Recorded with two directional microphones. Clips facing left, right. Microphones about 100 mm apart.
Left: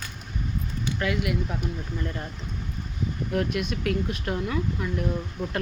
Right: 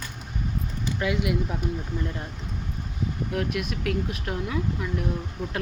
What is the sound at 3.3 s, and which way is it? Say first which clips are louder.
Speech: left 3 dB; 5° right (ahead or behind).